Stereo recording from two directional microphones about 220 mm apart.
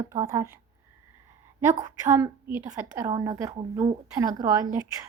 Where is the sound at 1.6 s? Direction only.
10° right (ahead or behind).